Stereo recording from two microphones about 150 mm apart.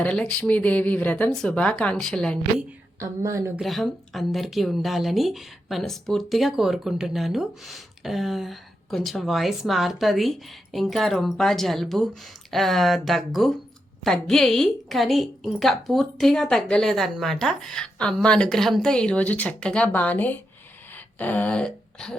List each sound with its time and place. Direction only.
0.0 s speech: 5° left (ahead or behind)
3.0 s a woman's voice: 20° right (ahead or behind)
3.6 s speech: centre (ahead or behind)
21.2 s a sound: 10° left (ahead or behind)